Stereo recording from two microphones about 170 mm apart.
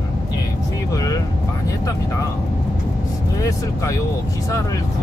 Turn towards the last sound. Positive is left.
turn(degrees=20)  # may be behind; listen again after turning